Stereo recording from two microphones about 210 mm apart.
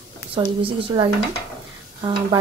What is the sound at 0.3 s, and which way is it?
A woman's voice, 25° right (ahead or behind).